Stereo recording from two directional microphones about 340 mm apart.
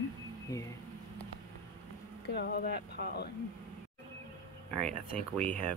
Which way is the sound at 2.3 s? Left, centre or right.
Left.